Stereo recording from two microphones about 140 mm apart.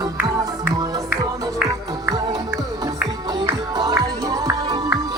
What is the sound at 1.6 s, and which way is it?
Music, 30° right (ahead or behind).